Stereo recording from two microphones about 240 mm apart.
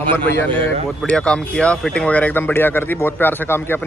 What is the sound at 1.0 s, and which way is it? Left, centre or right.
Speech, centre.